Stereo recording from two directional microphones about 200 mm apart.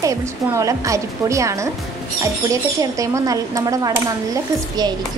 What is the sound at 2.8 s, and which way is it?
A woman's voice, 15° right (ahead or behind).